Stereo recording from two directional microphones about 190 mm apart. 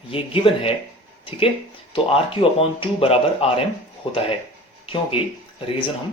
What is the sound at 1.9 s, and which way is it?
Speech, 30° left (ahead or behind).